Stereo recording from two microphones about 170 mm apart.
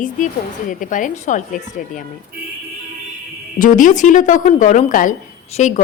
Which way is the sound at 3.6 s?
50° left (ahead or behind).